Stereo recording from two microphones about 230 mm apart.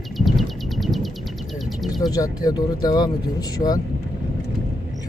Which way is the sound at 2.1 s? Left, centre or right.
Centre.